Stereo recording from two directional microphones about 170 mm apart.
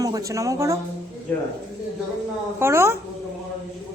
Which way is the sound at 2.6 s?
15° right (ahead or behind).